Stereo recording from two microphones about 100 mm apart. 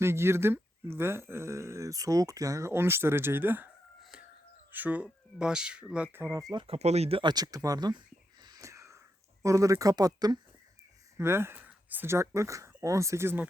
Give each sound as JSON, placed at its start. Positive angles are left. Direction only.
{"t": 0.0, "sound": "speech", "side_deg": -25}
{"t": 4.7, "sound": "speech", "side_deg": -15}
{"t": 6.1, "sound": "speech", "side_deg": -20}
{"t": 6.7, "sound": "speech", "side_deg": -90}
{"t": 7.2, "sound": "speech", "side_deg": -45}
{"t": 8.4, "sound": "wheeze", "side_deg": -35}
{"t": 9.4, "sound": "speech", "side_deg": -30}
{"t": 11.2, "sound": "speech", "side_deg": -25}